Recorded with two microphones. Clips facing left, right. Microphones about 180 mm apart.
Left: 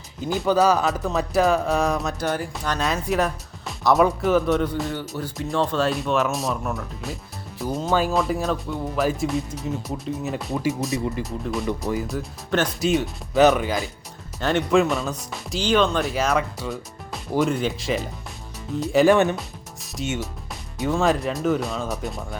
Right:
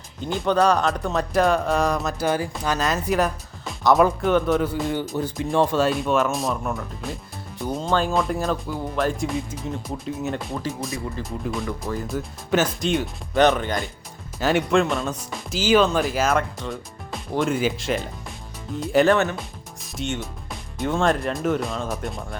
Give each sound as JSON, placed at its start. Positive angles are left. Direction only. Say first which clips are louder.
{"t": 0.2, "sound": "speech", "louder": "left 1 dB", "side_deg": 5}
{"t": 5.1, "sound": "speech", "louder": "right 3 dB", "side_deg": -20}
{"t": 5.7, "sound": "speech", "louder": "right 2 dB", "side_deg": 0}
{"t": 19.1, "sound": "speech", "louder": "left 3 dB", "side_deg": 15}
{"t": 19.8, "sound": "speech", "louder": "left 1 dB", "side_deg": 0}